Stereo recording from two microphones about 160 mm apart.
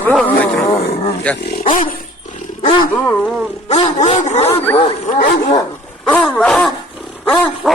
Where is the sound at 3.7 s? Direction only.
40° left (ahead or behind).